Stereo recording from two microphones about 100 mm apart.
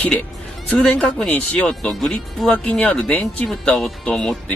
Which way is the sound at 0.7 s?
10° left (ahead or behind).